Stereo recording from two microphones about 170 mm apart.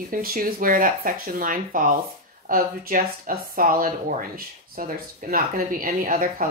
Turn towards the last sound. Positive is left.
turn(degrees=-55)  # may be behind; listen again after turning